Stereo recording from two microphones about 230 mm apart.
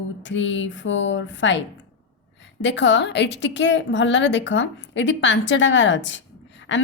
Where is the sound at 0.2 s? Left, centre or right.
Left.